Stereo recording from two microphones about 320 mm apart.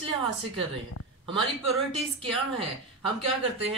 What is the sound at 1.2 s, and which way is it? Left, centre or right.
Speech, centre.